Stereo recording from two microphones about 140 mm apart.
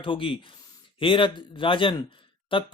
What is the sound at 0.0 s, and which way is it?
Speech, 40° left (ahead or behind).